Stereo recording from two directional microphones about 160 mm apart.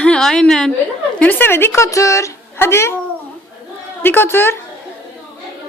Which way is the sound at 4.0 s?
15° left (ahead or behind).